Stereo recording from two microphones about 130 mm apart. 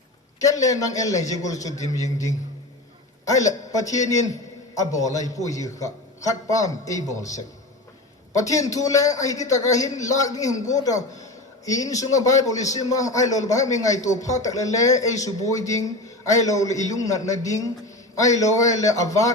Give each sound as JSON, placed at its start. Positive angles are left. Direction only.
{"t": 0.3, "sound": "a man's voice", "side_deg": 25}
{"t": 8.4, "sound": "a man's voice", "side_deg": 25}